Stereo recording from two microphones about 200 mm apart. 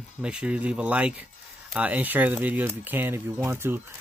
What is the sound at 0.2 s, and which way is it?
Speech, 5° right (ahead or behind).